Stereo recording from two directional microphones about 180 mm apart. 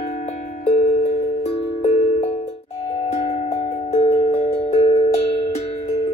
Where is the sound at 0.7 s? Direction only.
45° left (ahead or behind).